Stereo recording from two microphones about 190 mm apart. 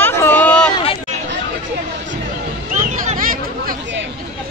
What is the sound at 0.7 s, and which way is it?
Chatter, 30° left (ahead or behind).